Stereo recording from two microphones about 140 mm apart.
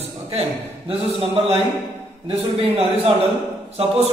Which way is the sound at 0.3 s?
45° right (ahead or behind).